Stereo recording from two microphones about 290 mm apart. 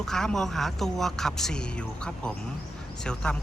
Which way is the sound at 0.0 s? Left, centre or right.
Centre.